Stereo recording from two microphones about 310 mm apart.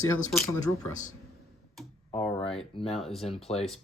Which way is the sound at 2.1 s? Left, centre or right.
Centre.